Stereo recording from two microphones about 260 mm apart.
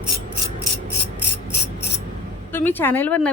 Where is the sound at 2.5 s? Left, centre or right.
Centre.